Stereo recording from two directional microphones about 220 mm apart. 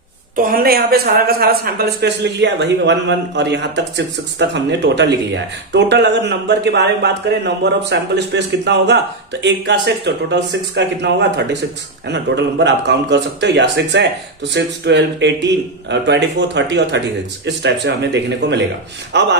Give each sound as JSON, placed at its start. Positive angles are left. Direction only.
{"t": 0.4, "sound": "speech", "side_deg": -40}